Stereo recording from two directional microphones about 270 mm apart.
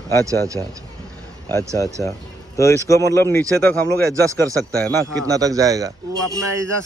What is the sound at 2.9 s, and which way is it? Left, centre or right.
Speech, centre.